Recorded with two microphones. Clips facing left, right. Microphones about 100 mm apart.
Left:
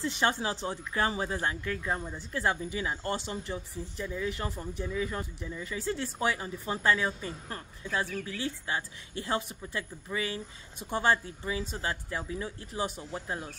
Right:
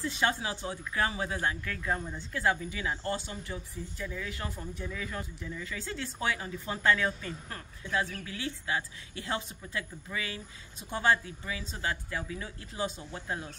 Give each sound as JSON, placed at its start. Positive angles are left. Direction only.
{"t": 0.0, "sound": "speech", "side_deg": 30}